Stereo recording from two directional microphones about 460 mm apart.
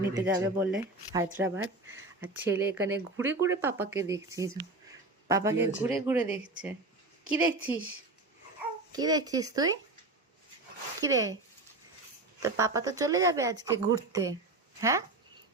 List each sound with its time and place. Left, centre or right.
0.1 s speech: centre
11.0 s speech: centre
12.4 s speech: centre